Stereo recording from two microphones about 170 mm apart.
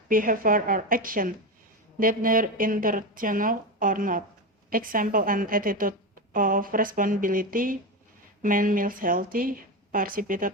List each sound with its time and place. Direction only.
0.1 s a woman's voice: 55° right (ahead or behind)